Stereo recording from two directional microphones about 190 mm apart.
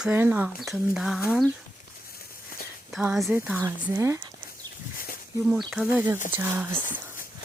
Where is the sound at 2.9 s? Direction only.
5° right (ahead or behind).